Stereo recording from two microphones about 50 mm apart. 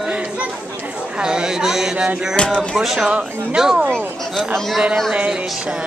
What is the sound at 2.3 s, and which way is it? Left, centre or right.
Speech, centre.